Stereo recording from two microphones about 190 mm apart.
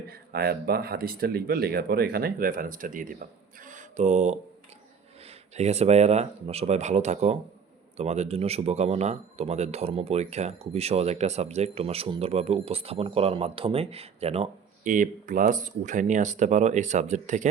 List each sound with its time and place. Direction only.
0.1 s speech: 55° right (ahead or behind); by 4.4 s 35° right (ahead or behind)
5.5 s speech: 35° right (ahead or behind)
14.8 s speech: 45° right (ahead or behind)